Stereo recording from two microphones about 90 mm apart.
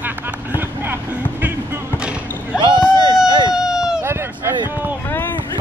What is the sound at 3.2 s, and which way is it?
Vehicle, 50° right (ahead or behind).